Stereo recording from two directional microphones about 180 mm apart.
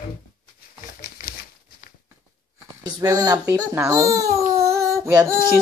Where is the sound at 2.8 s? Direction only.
20° right (ahead or behind).